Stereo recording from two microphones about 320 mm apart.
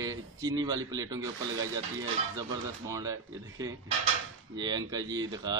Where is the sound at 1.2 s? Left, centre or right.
Right.